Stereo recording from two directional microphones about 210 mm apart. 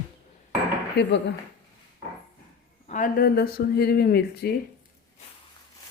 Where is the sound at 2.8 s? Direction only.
40° left (ahead or behind).